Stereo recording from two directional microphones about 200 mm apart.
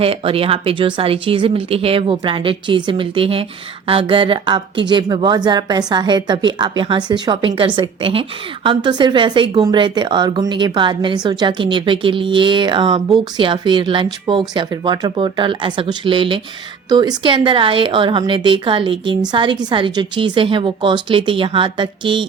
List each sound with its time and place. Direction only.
0.0 s a woman's voice: 30° right (ahead or behind)